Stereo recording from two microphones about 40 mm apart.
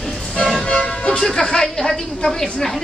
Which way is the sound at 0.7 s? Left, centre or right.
Left.